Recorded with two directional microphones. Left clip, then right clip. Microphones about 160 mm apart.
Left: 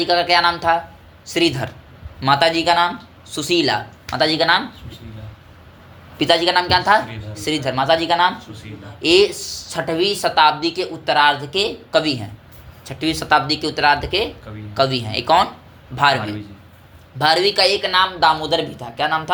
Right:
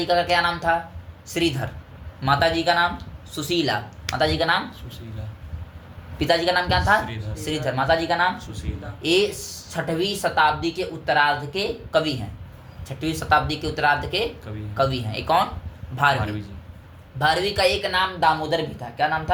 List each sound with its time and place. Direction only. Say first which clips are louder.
0.0 s speech: left 5 dB; 30° left (ahead or behind)
6.1 s speech: left 5 dB; 30° left (ahead or behind)
17.2 s speech: left 5 dB; 35° left (ahead or behind)